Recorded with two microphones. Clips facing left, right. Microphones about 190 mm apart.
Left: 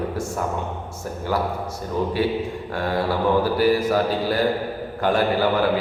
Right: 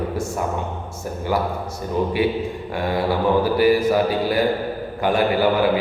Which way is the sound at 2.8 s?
15° right (ahead or behind).